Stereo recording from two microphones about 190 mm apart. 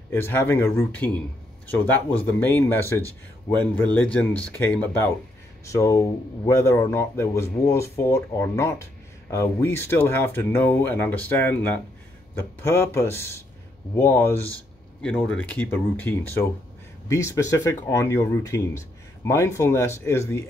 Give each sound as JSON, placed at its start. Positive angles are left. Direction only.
{"t": 0.1, "sound": "speech", "side_deg": 10}
{"t": 2.4, "sound": "speech", "side_deg": 10}